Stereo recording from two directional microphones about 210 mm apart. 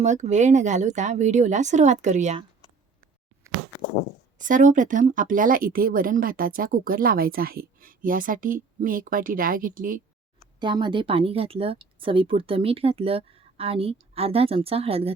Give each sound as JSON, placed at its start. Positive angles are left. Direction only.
{"t": 0.0, "sound": "speech", "side_deg": -35}
{"t": 4.4, "sound": "speech", "side_deg": -35}
{"t": 10.6, "sound": "speech", "side_deg": -20}